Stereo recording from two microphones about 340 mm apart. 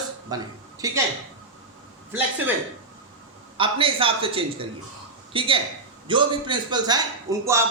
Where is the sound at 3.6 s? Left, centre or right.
Centre.